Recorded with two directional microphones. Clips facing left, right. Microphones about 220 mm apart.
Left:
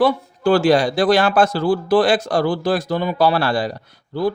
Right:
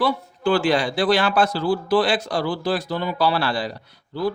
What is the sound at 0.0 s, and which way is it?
Speech, 40° left (ahead or behind).